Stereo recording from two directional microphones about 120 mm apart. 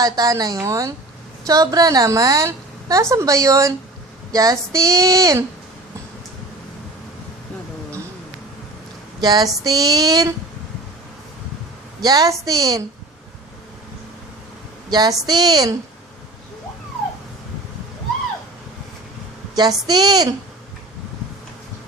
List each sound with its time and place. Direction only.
0.0 s a woman's voice: 30° right (ahead or behind)
9.2 s a woman's voice: 35° right (ahead or behind)
12.0 s a woman's voice: 30° right (ahead or behind)
14.8 s a woman's voice: 35° right (ahead or behind)
19.5 s a woman's voice: 35° right (ahead or behind)